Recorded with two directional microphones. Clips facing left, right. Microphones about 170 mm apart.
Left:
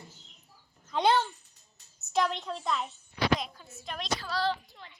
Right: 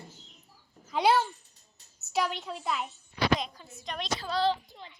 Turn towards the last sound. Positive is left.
turn(degrees=-20)  # may be behind; listen again after turning